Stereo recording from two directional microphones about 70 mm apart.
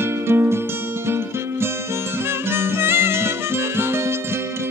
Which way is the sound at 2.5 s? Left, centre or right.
Right.